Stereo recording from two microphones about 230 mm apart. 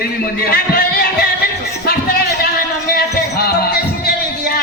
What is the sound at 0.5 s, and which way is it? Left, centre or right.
Music, left.